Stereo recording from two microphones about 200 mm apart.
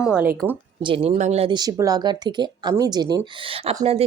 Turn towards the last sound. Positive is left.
turn(degrees=-30)  # may be behind; listen again after turning